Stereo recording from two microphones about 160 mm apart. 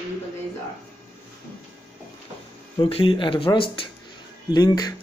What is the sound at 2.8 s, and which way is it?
Speech, 35° left (ahead or behind).